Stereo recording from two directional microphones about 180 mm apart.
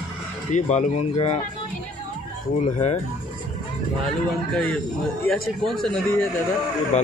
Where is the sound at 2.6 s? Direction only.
40° left (ahead or behind).